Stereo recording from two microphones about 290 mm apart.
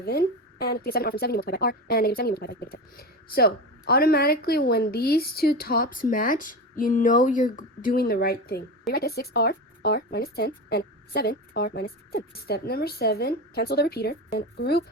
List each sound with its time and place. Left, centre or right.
0.0 s speech: left